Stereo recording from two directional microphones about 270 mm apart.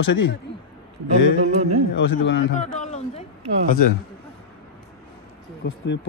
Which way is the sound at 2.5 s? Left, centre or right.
Left.